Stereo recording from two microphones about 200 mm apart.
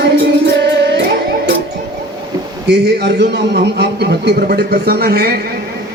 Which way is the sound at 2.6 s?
55° right (ahead or behind).